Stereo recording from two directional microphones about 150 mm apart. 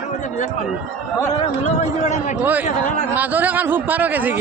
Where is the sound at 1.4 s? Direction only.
45° left (ahead or behind).